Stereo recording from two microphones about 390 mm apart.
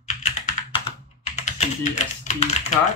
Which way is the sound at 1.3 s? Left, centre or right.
Centre.